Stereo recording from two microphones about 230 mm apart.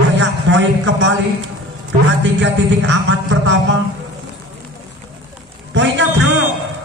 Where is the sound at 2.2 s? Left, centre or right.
Right.